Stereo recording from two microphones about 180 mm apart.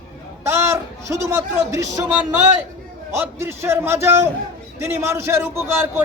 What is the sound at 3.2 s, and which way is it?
A man's voice, 15° right (ahead or behind).